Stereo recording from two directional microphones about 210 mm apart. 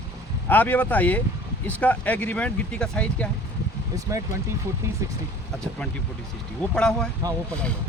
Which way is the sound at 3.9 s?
15° right (ahead or behind).